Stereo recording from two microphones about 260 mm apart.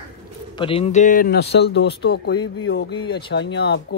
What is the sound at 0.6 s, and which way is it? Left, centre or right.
Speech, left.